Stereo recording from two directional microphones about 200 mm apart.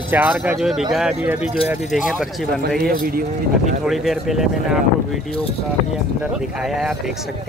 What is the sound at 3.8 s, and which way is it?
Speech, centre (ahead or behind).